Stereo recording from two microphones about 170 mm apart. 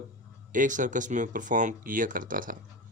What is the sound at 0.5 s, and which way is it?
Speech, 50° right (ahead or behind).